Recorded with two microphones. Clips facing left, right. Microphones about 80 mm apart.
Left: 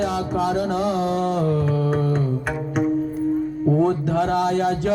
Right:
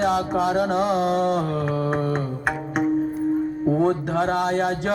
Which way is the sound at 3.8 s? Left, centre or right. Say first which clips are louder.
Left 2 dB; right.